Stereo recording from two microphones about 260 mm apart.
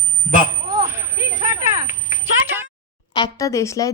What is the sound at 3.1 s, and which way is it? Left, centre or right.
Speech, centre.